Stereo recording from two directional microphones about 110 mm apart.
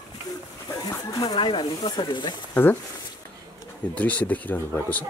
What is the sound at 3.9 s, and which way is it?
Speech, 15° left (ahead or behind).